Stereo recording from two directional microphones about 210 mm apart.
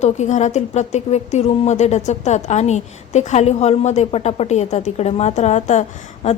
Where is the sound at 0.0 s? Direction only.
35° left (ahead or behind).